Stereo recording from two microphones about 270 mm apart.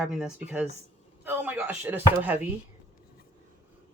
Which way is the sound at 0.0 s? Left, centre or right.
Centre.